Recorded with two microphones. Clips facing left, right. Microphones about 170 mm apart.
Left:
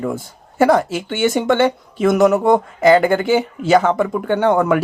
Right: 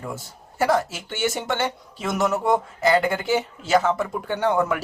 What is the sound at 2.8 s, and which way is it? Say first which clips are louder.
Speech: left 9 dB; 90° left.